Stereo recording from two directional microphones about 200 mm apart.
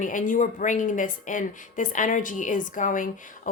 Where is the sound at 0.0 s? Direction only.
40° left (ahead or behind).